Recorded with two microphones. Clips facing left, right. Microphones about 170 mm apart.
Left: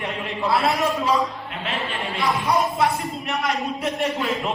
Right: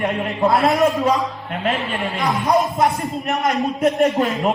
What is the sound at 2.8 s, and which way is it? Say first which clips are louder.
A man's voice: right 3 dB; 40° right (ahead or behind).